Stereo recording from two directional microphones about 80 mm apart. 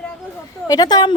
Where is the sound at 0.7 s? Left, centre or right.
Left.